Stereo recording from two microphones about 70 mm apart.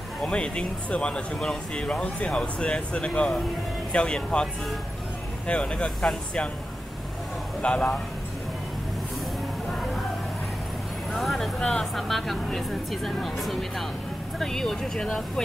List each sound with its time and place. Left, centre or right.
0.2 s speech: centre
5.5 s speech: centre
7.6 s speech: centre
11.1 s a woman's voice: centre